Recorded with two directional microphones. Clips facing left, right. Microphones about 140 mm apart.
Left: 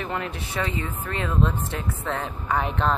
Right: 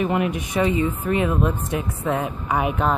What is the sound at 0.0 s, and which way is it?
A woman's voice, 15° right (ahead or behind).